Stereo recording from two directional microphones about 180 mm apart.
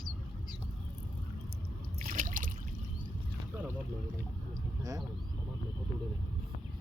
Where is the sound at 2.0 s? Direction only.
50° right (ahead or behind).